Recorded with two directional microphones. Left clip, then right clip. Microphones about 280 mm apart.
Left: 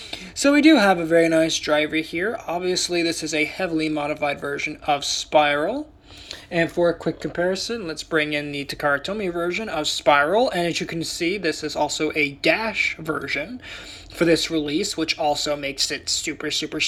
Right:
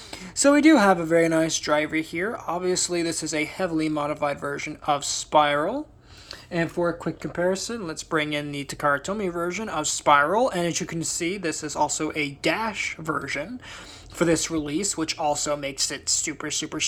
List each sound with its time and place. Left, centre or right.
0.4 s speech: right